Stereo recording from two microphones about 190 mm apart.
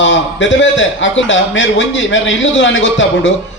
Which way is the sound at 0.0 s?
75° left (ahead or behind).